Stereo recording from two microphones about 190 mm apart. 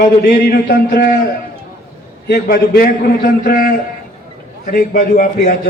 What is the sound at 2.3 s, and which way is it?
A man's voice, 55° left (ahead or behind).